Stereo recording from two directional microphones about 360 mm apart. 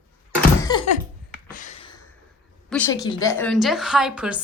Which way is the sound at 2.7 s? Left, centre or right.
Centre.